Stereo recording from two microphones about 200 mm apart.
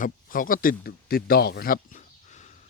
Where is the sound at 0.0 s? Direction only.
45° left (ahead or behind).